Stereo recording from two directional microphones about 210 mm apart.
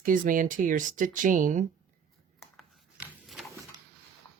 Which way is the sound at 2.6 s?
Centre (ahead or behind).